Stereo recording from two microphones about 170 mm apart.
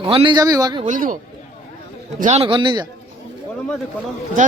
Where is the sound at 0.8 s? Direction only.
50° right (ahead or behind).